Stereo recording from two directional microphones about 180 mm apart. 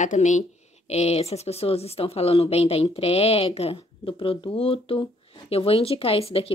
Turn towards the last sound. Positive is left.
turn(degrees=30)  # may be behind; listen again after turning